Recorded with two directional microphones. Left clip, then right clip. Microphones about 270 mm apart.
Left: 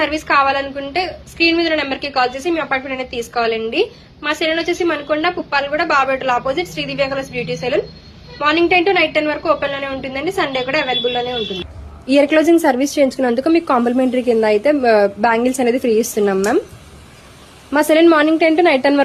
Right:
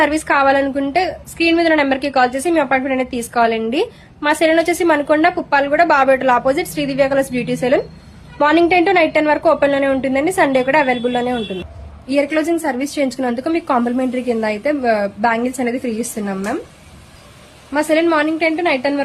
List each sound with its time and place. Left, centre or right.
0.0 s a woman's voice: centre
12.0 s a woman's voice: centre
17.7 s a woman's voice: centre